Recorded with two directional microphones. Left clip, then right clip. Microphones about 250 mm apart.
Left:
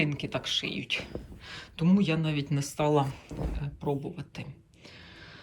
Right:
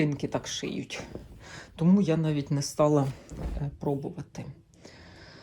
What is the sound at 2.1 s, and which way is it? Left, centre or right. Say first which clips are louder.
Speech: right 3 dB; right.